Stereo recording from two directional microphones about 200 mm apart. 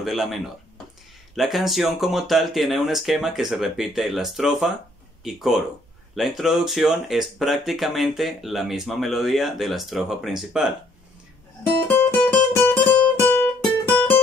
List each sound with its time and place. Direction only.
0.0 s speech: centre (ahead or behind)
12.2 s music: 10° left (ahead or behind)